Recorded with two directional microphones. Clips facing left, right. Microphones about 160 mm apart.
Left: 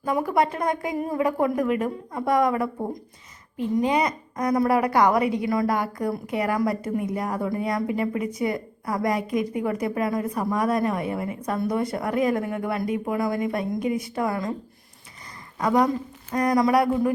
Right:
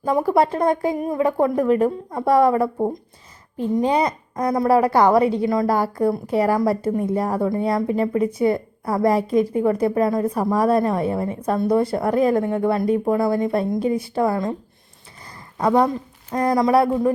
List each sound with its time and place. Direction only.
0.0 s a woman's voice: 30° right (ahead or behind)
0.9 s a woman's voice: 20° right (ahead or behind)
15.5 s a woman's voice: 30° right (ahead or behind)